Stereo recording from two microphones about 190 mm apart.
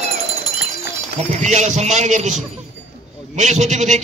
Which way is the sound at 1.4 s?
40° right (ahead or behind).